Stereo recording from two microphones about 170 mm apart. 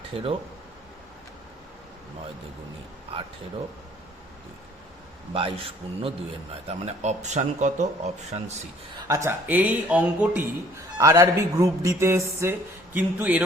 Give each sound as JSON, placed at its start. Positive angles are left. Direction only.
{"t": 0.1, "sound": "speech", "side_deg": -35}
{"t": 5.3, "sound": "speech", "side_deg": -30}
{"t": 9.0, "sound": "speech", "side_deg": -15}
{"t": 10.9, "sound": "speech", "side_deg": -20}